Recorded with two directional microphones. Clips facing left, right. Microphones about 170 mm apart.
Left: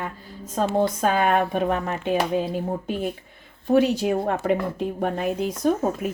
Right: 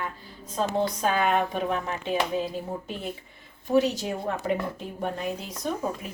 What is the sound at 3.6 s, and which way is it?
Speech, 55° left (ahead or behind).